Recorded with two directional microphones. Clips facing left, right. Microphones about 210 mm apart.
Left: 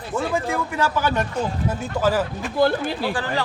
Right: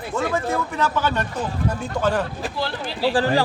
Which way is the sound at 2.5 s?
50° left (ahead or behind).